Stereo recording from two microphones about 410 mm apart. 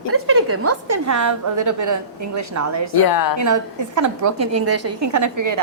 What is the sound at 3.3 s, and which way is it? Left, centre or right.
A woman's voice, right.